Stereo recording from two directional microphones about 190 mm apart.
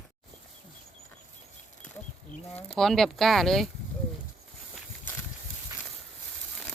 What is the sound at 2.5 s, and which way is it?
Speech, centre (ahead or behind).